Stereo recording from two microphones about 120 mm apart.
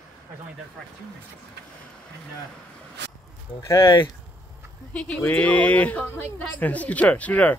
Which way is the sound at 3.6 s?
25° left (ahead or behind).